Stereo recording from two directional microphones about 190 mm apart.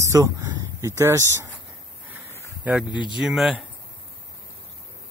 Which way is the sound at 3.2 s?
Centre (ahead or behind).